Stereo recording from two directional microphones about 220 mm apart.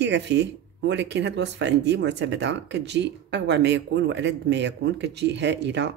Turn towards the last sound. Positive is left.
turn(degrees=-50)  # may be behind; listen again after turning